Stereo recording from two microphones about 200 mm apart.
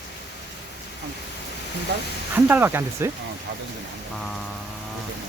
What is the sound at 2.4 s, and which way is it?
Speech, 10° right (ahead or behind).